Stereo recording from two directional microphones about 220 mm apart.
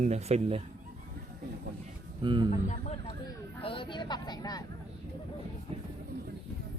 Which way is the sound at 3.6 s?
25° left (ahead or behind).